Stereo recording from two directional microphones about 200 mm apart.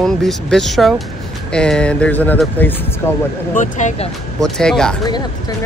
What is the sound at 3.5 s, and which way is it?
Speech, 35° left (ahead or behind).